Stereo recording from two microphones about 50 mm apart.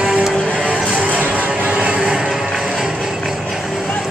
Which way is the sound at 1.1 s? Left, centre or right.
Right.